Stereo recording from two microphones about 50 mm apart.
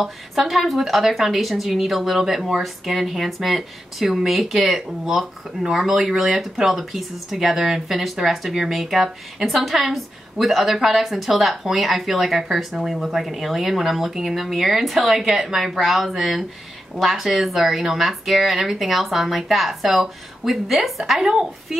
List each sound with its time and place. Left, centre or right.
0.0 s a woman's voice: centre